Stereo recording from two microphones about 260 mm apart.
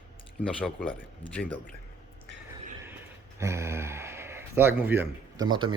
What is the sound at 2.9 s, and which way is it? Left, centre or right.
Speech, centre.